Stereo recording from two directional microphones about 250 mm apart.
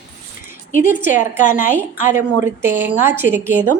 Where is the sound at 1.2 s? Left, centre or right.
Left.